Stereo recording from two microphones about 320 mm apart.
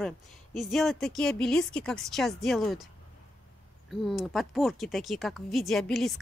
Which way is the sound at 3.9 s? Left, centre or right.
Centre.